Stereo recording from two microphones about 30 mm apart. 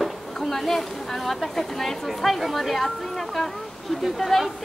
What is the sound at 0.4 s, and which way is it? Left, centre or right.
A woman's voice, centre.